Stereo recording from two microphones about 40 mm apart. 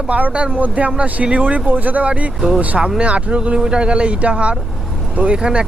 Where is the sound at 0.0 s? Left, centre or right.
Right.